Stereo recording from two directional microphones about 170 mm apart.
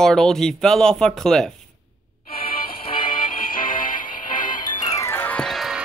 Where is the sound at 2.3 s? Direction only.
60° left (ahead or behind).